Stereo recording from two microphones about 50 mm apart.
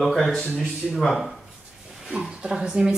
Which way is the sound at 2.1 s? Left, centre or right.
Centre.